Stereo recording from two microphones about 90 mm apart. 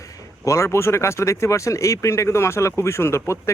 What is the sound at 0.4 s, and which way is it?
Speech, 35° left (ahead or behind).